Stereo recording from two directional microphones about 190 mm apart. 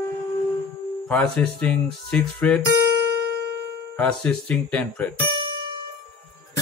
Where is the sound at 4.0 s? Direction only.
5° left (ahead or behind).